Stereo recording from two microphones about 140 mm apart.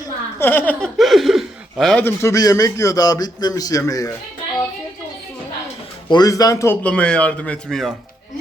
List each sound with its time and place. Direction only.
0.3 s speech: 15° left (ahead or behind)
0.9 s speech: centre (ahead or behind)
2.0 s a man's voice: 20° left (ahead or behind)
6.1 s a man's voice: 30° left (ahead or behind)
6.8 s speech: 10° left (ahead or behind)